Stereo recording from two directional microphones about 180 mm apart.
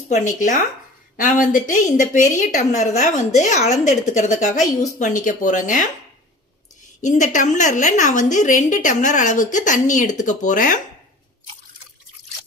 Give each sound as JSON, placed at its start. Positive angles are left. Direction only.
{"t": 0.1, "sound": "a woman's voice", "side_deg": 45}
{"t": 7.0, "sound": "a woman's voice", "side_deg": 45}